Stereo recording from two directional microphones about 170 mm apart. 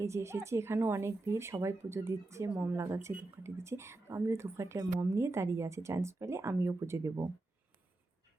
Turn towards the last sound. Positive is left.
turn(degrees=-15)  # may be behind; listen again after turning